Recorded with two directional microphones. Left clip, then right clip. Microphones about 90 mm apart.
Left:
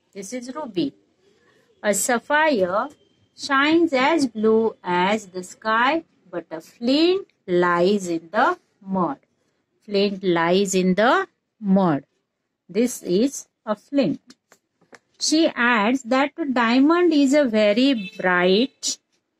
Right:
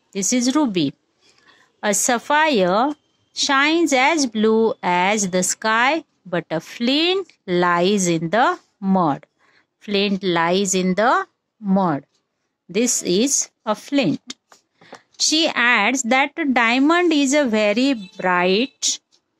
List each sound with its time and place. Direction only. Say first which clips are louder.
0.1 s a woman's voice: right 12 dB; 50° right (ahead or behind)
4.8 s speech: right 3 dB; 35° right (ahead or behind)
8.1 s a woman's voice: right 3 dB; 45° right (ahead or behind)
10.2 s speech: even; 30° right (ahead or behind)
12.7 s speech: right 2 dB; 55° right (ahead or behind)
15.1 s speech: right 1 dB; 70° right (ahead or behind)
15.5 s speech: right 3 dB; 40° right (ahead or behind)
15.9 s speech: right 3 dB; 50° right (ahead or behind)